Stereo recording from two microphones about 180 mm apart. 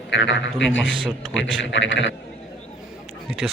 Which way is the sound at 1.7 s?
80° left.